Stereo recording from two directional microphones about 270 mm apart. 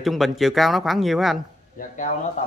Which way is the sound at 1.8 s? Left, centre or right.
Left.